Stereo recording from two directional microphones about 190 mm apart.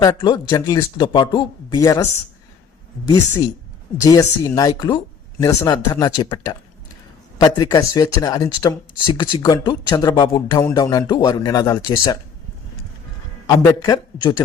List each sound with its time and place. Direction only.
0.0 s speech: 20° left (ahead or behind)
3.1 s speech: 20° left (ahead or behind)
13.5 s speech: 20° left (ahead or behind)